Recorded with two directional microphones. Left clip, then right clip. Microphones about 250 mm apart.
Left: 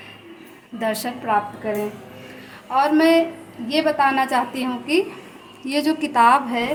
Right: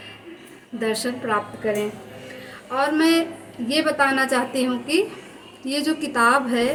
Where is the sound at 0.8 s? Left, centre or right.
Left.